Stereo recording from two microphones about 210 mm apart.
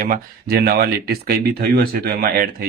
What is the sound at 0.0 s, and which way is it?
Speech, 45° right (ahead or behind).